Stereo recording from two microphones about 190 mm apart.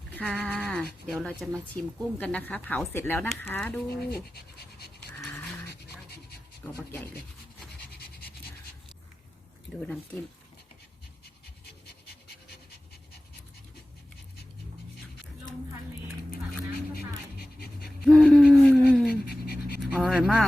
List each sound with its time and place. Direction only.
0.1 s toothbrush: 5° left (ahead or behind)
1.0 s speech: 5° left (ahead or behind)
4.1 s pant: 55° left (ahead or behind)
6.7 s speech: 10° left (ahead or behind)
7.9 s scratch: 55° left (ahead or behind)
9.8 s speech: 5° left (ahead or behind)
16.9 s pant: 55° left (ahead or behind)
17.8 s a sound: centre (ahead or behind)
19.3 s pant: 55° left (ahead or behind)
19.8 s pant: centre (ahead or behind)